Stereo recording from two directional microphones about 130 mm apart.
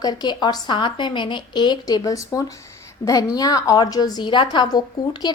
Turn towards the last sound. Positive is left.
turn(degrees=35)  # may be behind; listen again after turning